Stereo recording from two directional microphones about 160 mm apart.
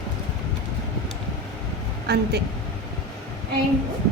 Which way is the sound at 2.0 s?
90° right.